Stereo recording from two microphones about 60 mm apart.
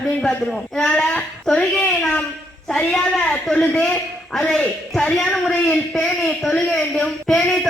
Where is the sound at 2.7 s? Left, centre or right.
Centre.